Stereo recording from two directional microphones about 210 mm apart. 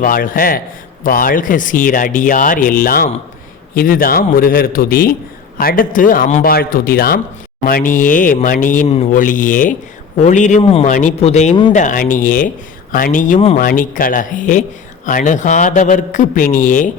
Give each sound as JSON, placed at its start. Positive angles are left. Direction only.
{"t": 0.0, "sound": "a man's voice", "side_deg": 40}